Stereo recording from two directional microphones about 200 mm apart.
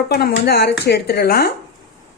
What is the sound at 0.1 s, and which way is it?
Speech, 55° left (ahead or behind).